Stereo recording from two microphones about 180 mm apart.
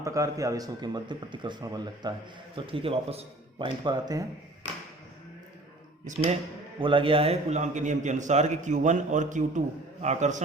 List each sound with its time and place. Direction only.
0.0 s a man's voice: 15° right (ahead or behind)
6.1 s speech: 45° right (ahead or behind)
6.7 s a man's voice: 30° right (ahead or behind)